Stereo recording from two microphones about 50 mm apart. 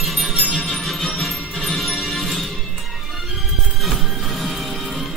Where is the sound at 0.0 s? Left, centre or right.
Centre.